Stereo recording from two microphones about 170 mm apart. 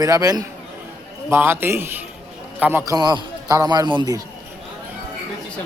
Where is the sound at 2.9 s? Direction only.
25° right (ahead or behind).